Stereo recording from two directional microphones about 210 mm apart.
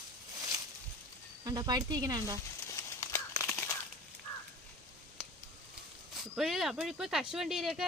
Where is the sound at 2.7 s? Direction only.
15° left (ahead or behind).